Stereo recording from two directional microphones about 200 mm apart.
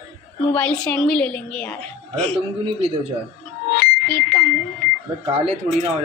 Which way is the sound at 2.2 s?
30° right (ahead or behind).